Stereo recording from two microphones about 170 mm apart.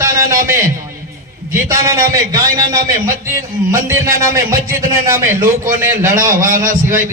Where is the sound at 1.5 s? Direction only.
20° right (ahead or behind).